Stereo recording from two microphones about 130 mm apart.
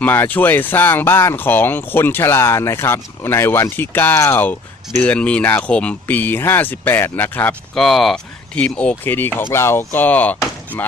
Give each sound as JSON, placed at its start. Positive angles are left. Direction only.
{"t": 0.0, "sound": "speech", "side_deg": 15}
{"t": 7.8, "sound": "speech", "side_deg": 0}